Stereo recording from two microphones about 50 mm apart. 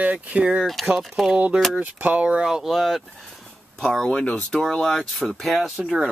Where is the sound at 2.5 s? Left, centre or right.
Centre.